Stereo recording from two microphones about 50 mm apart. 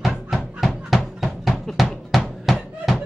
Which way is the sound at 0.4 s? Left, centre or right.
Centre.